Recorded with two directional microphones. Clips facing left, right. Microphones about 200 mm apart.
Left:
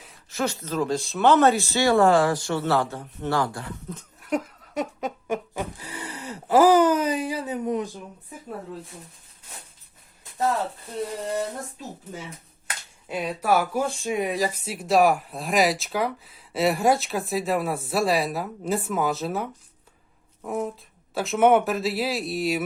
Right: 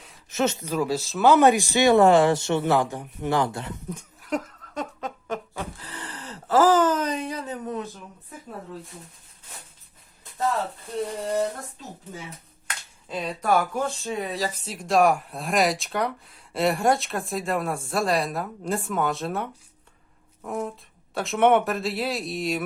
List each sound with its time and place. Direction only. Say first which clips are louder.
0.3 s speech: right 3 dB; 20° right (ahead or behind)
4.2 s a sound: left 2 dB; 5° left (ahead or behind)
12.6 s speech: left 2 dB; 10° left (ahead or behind)